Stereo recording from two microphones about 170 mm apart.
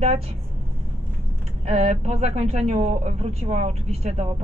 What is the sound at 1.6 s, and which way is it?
A woman's voice, 40° right (ahead or behind).